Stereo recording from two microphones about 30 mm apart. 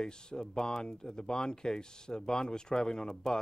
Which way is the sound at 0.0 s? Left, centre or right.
Left.